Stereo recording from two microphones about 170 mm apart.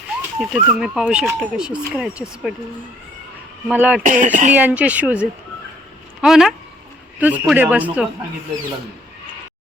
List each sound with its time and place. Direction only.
0.2 s speech: 5° right (ahead or behind)
3.7 s speech: 5° right (ahead or behind)
4.0 s speech: 50° right (ahead or behind)
4.5 s speech: 10° right (ahead or behind)